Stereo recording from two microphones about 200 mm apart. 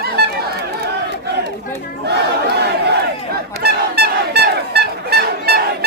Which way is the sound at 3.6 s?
55° right (ahead or behind).